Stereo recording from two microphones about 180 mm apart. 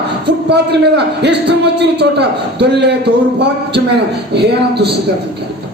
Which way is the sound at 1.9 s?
70° right (ahead or behind).